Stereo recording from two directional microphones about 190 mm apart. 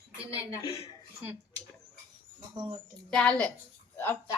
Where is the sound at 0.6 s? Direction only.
30° left (ahead or behind).